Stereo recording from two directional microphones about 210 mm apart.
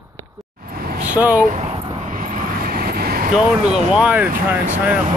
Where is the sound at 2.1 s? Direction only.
40° right (ahead or behind).